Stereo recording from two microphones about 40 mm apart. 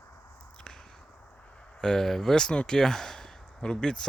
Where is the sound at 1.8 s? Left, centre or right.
Centre.